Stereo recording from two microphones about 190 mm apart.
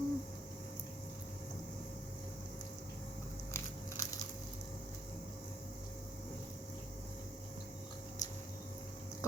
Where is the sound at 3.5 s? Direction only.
15° left (ahead or behind).